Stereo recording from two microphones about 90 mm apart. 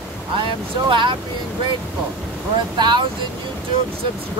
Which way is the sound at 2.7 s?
55° right (ahead or behind).